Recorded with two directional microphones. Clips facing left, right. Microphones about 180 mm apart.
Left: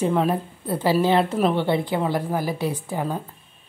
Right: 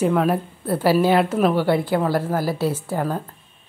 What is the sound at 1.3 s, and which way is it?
Speech, 5° right (ahead or behind).